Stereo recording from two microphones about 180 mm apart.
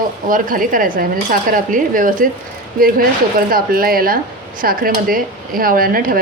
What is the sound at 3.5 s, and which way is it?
A woman's voice, 55° right (ahead or behind).